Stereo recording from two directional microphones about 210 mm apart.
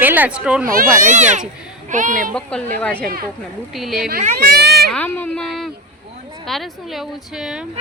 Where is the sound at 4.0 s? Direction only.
40° right (ahead or behind).